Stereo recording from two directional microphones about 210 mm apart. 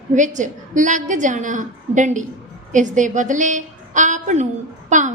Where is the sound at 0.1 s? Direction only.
35° right (ahead or behind).